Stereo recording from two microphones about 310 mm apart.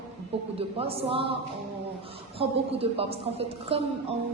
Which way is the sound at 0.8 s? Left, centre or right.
Centre.